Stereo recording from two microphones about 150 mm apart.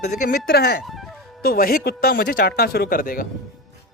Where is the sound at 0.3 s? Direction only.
90° left.